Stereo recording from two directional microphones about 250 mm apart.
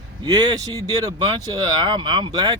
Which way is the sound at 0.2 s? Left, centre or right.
Centre.